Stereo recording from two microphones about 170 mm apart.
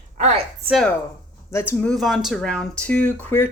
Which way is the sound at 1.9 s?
Centre (ahead or behind).